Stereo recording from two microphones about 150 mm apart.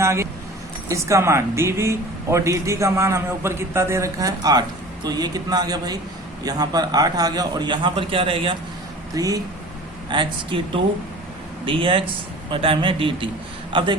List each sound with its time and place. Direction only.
0.0 s keys jangling: 20° right (ahead or behind)
0.9 s speech: 20° right (ahead or behind); by 8.5 s 35° right (ahead or behind)
9.1 s a man's voice: 25° right (ahead or behind)